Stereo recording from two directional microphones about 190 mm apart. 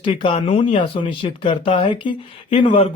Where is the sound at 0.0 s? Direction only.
25° left (ahead or behind).